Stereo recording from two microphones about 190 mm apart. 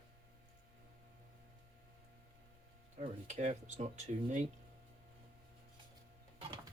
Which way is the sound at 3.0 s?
40° right (ahead or behind).